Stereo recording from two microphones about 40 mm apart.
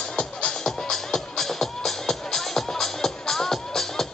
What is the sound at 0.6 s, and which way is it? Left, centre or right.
Music, centre.